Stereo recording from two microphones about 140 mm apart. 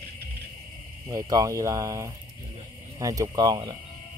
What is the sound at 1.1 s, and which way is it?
Speech, 25° right (ahead or behind).